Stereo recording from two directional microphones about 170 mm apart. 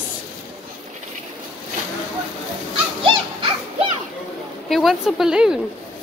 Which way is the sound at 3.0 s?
30° right (ahead or behind).